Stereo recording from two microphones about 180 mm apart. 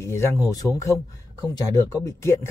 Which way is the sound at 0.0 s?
15° left (ahead or behind).